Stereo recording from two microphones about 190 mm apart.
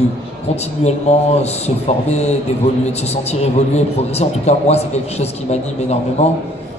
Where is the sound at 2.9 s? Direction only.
35° left (ahead or behind).